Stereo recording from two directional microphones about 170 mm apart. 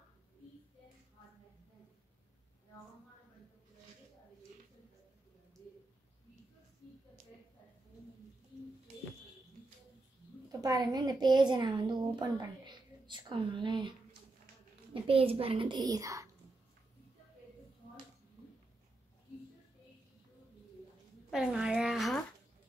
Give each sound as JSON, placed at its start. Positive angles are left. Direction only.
{"t": 10.6, "sound": "a woman's voice", "side_deg": -20}
{"t": 15.0, "sound": "a child's voice", "side_deg": -35}
{"t": 21.3, "sound": "a woman's voice", "side_deg": -5}